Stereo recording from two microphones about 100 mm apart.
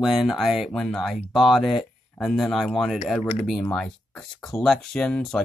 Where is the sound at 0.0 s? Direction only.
Centre (ahead or behind).